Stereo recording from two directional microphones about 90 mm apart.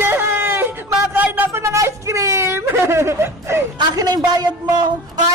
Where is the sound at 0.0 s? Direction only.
25° right (ahead or behind).